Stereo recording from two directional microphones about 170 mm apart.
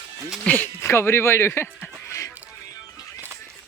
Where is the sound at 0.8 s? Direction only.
15° left (ahead or behind).